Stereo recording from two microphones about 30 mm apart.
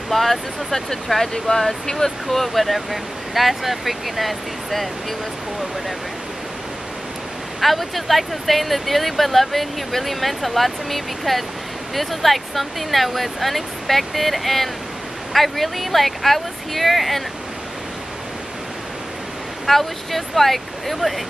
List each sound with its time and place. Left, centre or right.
0.1 s speech: centre
1.9 s speech: centre
2.2 s speech: centre
7.6 s speech: centre
19.6 s speech: centre